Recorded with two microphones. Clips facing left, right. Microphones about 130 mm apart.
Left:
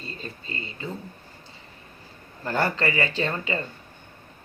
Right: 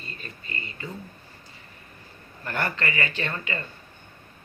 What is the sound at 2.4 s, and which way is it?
Speech, 30° left (ahead or behind).